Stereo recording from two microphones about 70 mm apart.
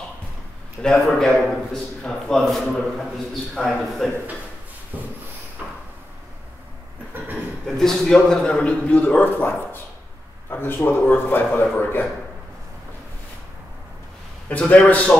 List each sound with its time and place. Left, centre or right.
0.8 s a man's voice: centre
4.9 s a sound: right
7.6 s a man's voice: centre; by 12.1 s left
14.5 s speech: centre